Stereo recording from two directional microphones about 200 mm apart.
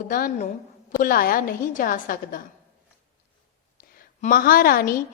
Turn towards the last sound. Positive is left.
turn(degrees=45)  # may be behind; listen again after turning